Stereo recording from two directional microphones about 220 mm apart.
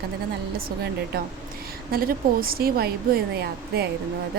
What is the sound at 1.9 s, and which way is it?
A woman's voice, 40° right (ahead or behind).